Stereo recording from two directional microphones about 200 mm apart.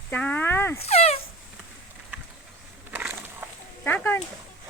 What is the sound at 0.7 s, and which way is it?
Speech, 30° left (ahead or behind).